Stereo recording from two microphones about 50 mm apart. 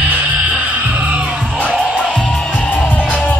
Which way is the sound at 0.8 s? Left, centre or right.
Right.